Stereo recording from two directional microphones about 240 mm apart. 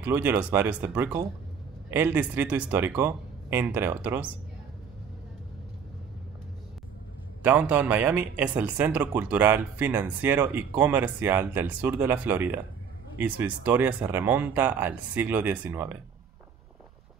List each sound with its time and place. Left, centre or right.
0.0 s speech: centre
7.4 s speech: centre